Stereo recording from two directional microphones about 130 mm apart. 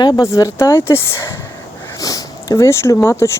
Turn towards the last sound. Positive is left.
turn(degrees=20)  # may be behind; listen again after turning